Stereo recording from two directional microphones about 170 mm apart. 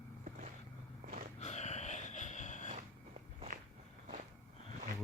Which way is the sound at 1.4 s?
40° left (ahead or behind).